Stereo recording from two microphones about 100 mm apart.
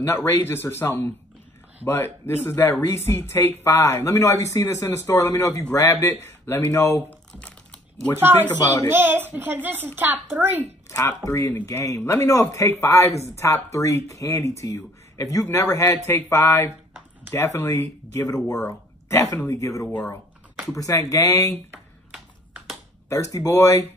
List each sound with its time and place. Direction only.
0.0 s speech: 25° left (ahead or behind)
7.1 s typing: 10° left (ahead or behind)
8.9 s speech: 20° right (ahead or behind)
10.9 s speech: 30° left (ahead or behind)
19.9 s speech: 20° left (ahead or behind)
23.0 s speech: 30° left (ahead or behind)